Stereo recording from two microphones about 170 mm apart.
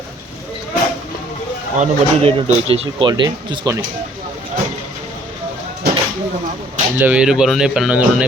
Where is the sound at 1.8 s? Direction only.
35° right (ahead or behind).